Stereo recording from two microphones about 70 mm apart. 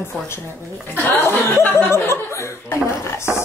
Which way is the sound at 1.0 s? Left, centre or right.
Left.